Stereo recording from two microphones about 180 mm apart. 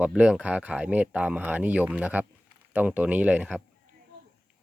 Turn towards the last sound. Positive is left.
turn(degrees=-5)  # may be behind; listen again after turning